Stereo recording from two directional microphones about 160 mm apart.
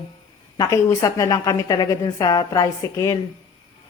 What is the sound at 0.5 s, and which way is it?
A woman's voice, 20° left (ahead or behind).